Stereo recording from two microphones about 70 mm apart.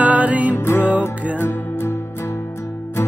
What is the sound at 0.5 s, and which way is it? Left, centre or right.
Music, left.